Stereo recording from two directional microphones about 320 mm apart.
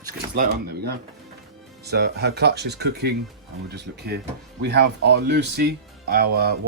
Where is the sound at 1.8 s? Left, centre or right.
Right.